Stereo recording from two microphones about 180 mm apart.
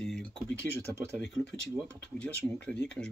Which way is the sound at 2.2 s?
5° left (ahead or behind).